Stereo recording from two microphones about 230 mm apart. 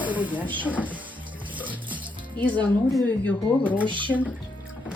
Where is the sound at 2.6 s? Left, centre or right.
Centre.